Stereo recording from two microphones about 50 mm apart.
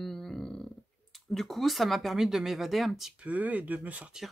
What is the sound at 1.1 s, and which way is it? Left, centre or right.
Speech, centre.